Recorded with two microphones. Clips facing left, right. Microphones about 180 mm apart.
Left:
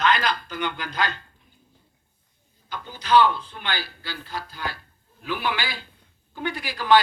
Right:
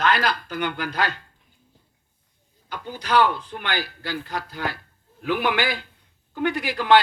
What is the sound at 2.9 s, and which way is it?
A man's voice, 10° right (ahead or behind).